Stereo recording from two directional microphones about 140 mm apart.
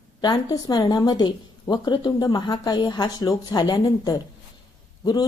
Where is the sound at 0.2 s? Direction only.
30° left (ahead or behind).